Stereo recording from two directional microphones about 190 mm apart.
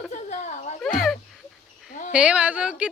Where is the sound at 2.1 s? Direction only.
5° right (ahead or behind).